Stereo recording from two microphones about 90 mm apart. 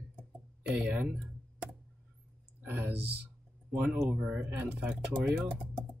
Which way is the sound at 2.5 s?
20° right (ahead or behind).